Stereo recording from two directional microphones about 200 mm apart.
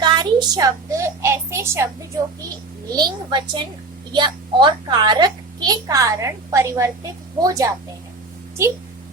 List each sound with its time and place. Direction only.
0.0 s a child's voice: 20° right (ahead or behind)
2.9 s a child's voice: 20° right (ahead or behind)